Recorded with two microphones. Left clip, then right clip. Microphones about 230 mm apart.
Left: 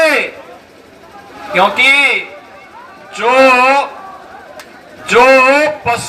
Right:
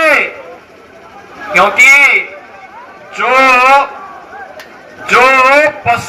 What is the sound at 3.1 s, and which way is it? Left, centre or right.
Speech, left.